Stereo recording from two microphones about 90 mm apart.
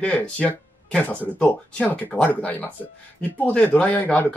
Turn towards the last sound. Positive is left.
turn(degrees=15)  # may be behind; listen again after turning